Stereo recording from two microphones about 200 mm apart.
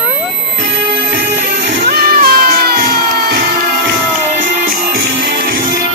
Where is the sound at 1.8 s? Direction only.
45° right (ahead or behind).